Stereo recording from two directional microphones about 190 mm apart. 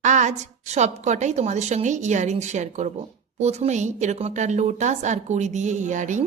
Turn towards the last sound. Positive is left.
turn(degrees=-40)  # may be behind; listen again after turning